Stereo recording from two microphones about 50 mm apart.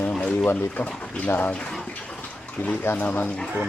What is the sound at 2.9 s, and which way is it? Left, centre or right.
Speech, left.